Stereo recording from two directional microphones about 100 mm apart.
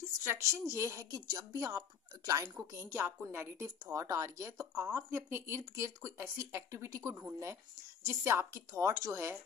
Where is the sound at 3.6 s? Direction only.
40° right (ahead or behind).